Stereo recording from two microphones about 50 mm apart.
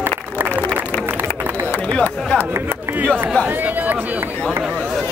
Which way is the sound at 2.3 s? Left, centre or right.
Left.